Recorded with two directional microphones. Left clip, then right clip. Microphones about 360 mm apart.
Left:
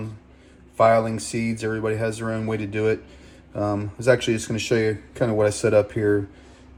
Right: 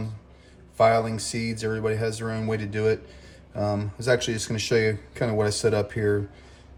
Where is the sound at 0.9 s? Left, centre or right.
Centre.